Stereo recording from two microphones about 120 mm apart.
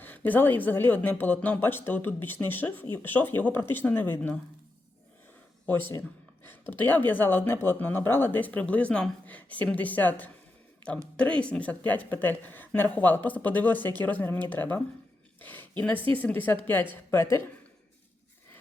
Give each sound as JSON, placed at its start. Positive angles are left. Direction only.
{"t": 0.0, "sound": "speech", "side_deg": 15}
{"t": 5.6, "sound": "speech", "side_deg": 15}
{"t": 15.4, "sound": "a sound", "side_deg": 15}
{"t": 16.1, "sound": "speech", "side_deg": 15}